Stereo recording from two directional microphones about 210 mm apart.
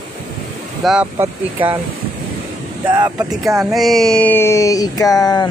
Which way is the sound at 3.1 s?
5° right (ahead or behind).